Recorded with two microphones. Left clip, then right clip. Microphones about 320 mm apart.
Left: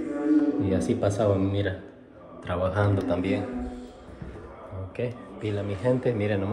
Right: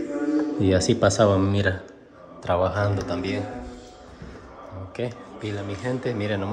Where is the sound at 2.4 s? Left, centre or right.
Centre.